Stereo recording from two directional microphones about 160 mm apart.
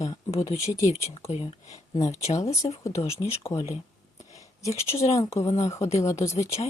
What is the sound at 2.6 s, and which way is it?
Speech, 35° left (ahead or behind).